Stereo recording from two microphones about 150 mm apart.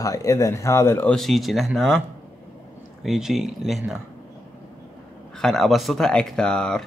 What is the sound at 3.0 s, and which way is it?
Speech, centre (ahead or behind).